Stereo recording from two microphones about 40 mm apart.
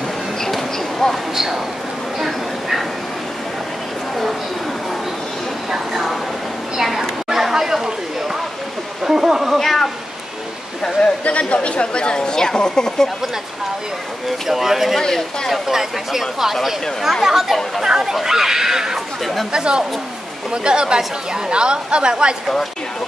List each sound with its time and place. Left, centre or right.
0.4 s a sound: centre
1.3 s speech: centre
2.1 s bow-wow: centre
6.8 s a sound: centre
9.0 s a sound: centre
9.6 s cat: centre
11.0 s a woman's voice: left
14.5 s speech: centre
15.0 s speech: centre
15.5 s a woman's voice: centre; by 22.1 s right